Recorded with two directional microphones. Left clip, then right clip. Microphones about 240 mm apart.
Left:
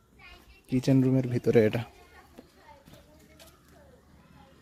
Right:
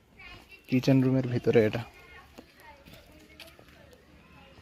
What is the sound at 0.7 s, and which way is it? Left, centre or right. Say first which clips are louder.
Speech: even; centre.